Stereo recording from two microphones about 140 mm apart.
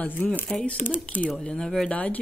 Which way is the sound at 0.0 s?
10° left (ahead or behind).